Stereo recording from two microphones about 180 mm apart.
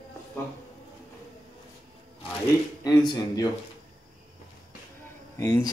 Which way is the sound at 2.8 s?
20° left (ahead or behind).